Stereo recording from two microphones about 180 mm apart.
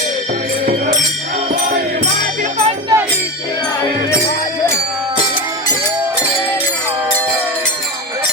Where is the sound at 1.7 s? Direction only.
40° right (ahead or behind).